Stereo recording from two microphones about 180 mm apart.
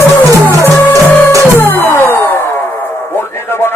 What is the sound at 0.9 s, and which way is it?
Music, 20° right (ahead or behind).